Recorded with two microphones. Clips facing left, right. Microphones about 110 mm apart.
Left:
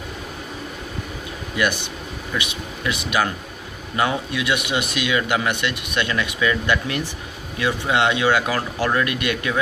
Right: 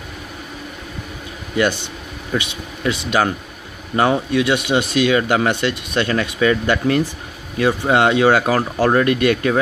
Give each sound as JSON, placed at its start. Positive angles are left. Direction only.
{"t": 2.3, "sound": "speech", "side_deg": -30}